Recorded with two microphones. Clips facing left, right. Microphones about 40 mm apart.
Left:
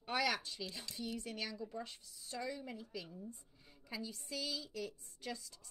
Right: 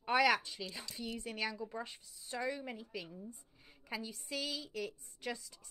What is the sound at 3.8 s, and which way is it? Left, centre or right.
A woman's voice, right.